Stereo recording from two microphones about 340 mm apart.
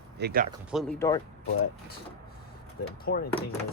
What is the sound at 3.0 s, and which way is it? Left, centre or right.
Speech, left.